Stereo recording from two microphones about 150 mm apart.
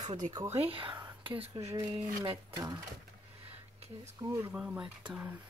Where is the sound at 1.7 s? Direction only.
30° right (ahead or behind).